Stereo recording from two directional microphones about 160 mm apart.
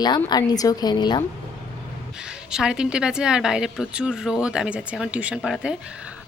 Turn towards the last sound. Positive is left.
turn(degrees=-5)  # may be behind; listen again after turning